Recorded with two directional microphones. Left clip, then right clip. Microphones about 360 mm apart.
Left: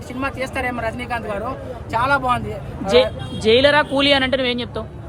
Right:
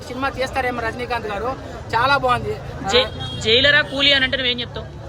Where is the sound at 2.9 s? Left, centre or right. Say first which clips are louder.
Left 3 dB; centre.